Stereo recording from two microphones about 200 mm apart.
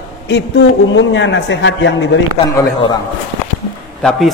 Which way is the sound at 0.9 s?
65° left (ahead or behind).